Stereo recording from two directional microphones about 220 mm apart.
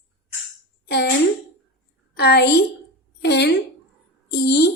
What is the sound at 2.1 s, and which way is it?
A child's voice, 50° left (ahead or behind).